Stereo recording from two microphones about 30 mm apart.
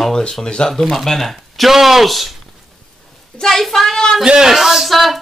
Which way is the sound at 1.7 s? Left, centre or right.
Centre.